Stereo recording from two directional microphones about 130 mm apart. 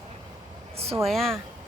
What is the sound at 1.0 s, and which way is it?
Speech, centre (ahead or behind).